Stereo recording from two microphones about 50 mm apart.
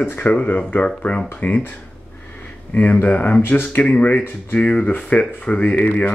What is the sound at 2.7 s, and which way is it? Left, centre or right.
Speech, left.